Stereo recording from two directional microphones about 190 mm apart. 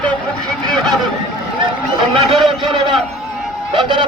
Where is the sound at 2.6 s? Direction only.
25° right (ahead or behind).